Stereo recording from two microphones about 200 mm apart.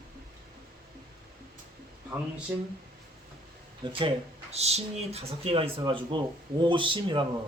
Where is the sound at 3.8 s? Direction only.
25° right (ahead or behind).